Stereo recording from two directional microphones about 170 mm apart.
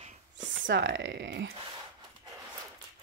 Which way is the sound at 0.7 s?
90° right.